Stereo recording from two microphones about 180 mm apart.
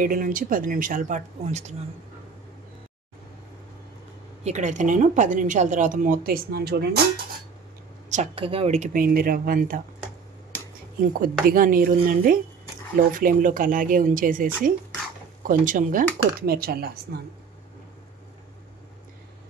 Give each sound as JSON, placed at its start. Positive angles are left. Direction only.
{"t": 0.0, "sound": "a woman's voice", "side_deg": -50}
{"t": 4.5, "sound": "a woman's voice", "side_deg": -40}
{"t": 8.1, "sound": "a woman's voice", "side_deg": -35}
{"t": 11.4, "sound": "a woman's voice", "side_deg": -50}